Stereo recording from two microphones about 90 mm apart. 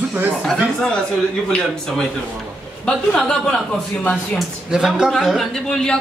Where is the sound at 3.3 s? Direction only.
10° left (ahead or behind).